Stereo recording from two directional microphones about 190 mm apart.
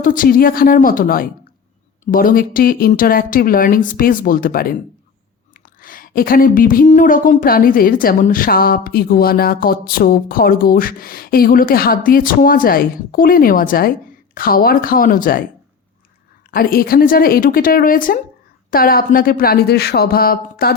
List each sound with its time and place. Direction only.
0.0 s a woman's voice: 45° left (ahead or behind)
5.8 s a woman's voice: 50° left (ahead or behind)
16.5 s a woman's voice: 50° left (ahead or behind)